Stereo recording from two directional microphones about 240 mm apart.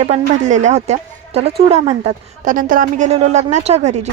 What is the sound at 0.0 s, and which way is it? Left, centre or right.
A woman's voice, right.